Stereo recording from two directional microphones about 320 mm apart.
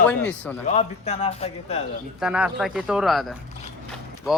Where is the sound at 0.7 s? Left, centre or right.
Centre.